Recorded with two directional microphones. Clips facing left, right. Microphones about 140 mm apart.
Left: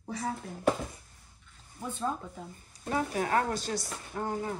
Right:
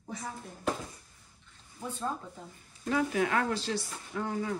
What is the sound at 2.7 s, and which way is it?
Speech, 40° left (ahead or behind).